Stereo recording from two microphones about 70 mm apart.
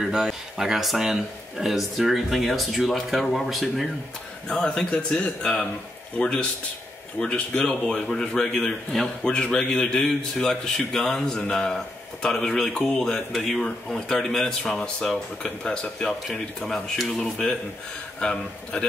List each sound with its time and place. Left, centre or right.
0.0 s speech: centre
4.5 s a man's voice: centre